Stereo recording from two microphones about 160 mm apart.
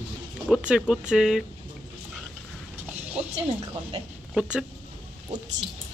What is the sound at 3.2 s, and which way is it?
Speech, 40° right (ahead or behind).